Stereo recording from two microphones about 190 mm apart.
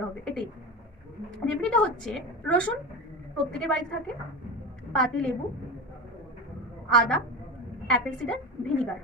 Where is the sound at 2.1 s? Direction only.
5° left (ahead or behind).